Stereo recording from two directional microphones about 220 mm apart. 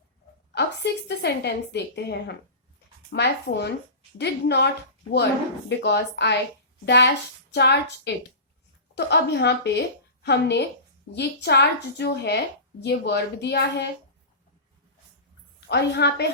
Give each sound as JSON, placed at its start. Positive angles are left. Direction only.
{"t": 0.5, "sound": "a woman's voice", "side_deg": 50}
{"t": 15.7, "sound": "a woman's voice", "side_deg": 50}